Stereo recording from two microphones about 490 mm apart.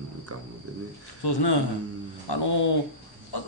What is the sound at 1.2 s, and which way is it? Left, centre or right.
A man's voice, left.